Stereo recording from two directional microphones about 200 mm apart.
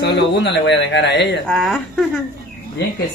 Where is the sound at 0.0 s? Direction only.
60° left (ahead or behind).